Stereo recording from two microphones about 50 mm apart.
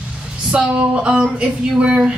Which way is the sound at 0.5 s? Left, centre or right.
Centre.